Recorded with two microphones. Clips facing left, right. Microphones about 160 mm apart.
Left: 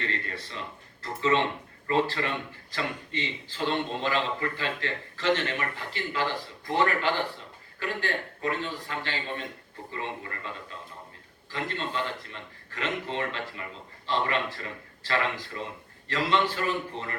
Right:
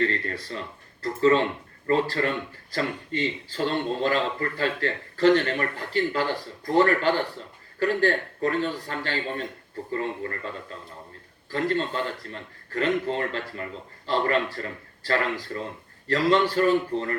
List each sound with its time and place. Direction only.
0.0 s a man's voice: 40° right (ahead or behind)
11.5 s a man's voice: 40° right (ahead or behind)